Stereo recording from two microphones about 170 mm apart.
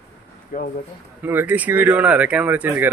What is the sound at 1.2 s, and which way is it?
A man's voice, 10° right (ahead or behind).